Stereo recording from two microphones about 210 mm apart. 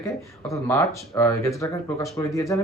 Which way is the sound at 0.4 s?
15° left (ahead or behind).